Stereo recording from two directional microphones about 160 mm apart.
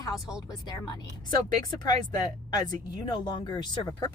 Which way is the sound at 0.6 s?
25° left (ahead or behind).